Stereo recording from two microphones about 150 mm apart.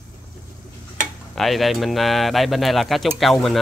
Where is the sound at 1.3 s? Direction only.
Centre (ahead or behind).